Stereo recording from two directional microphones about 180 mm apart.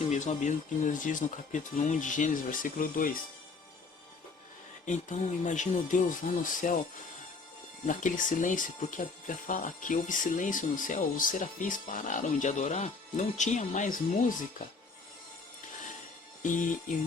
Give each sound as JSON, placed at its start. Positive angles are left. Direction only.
{"t": 0.0, "sound": "speech", "side_deg": 40}
{"t": 4.9, "sound": "speech", "side_deg": 40}
{"t": 7.9, "sound": "speech", "side_deg": 45}